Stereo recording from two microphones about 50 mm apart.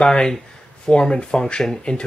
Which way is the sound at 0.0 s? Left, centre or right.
Centre.